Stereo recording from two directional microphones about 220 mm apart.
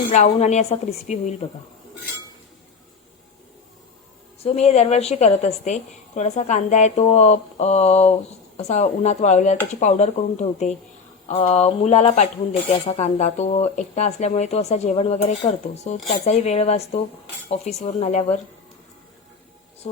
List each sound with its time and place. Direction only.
0.1 s a woman's voice: 30° left (ahead or behind)
4.4 s a woman's voice: 30° left (ahead or behind)